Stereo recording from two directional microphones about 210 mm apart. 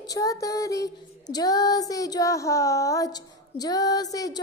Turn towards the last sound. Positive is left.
turn(degrees=15)  # may be behind; listen again after turning